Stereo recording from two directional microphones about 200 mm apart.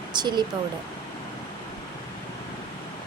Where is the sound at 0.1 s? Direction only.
20° right (ahead or behind).